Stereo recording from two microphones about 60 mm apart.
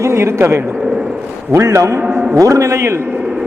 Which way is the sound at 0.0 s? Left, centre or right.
Right.